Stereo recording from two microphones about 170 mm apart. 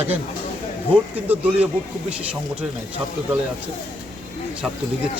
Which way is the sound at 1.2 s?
10° right (ahead or behind).